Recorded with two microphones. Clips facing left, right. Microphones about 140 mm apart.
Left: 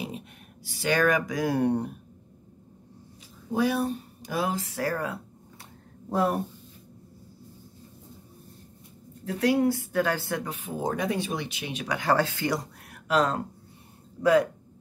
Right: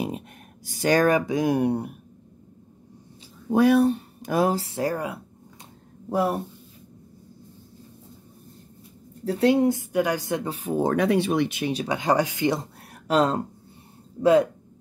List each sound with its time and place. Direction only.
0.7 s speech: 40° right (ahead or behind); by 2.0 s 10° right (ahead or behind)
3.4 s speech: 55° right (ahead or behind); by 4.9 s 25° right (ahead or behind)
4.9 s a woman's voice: 15° right (ahead or behind)
9.2 s speech: 30° right (ahead or behind)
10.4 s speech: 35° right (ahead or behind)
10.8 s speech: 65° right (ahead or behind)
11.7 s speech: 30° right (ahead or behind)
12.0 s speech: 15° right (ahead or behind)